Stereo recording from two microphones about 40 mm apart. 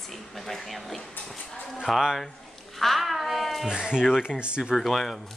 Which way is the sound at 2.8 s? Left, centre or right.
Centre.